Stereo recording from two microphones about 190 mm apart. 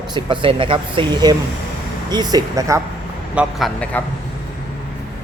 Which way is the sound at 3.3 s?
5° left (ahead or behind).